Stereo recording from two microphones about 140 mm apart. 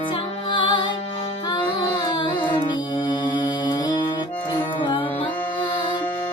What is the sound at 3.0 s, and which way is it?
Mantra, 35° left (ahead or behind).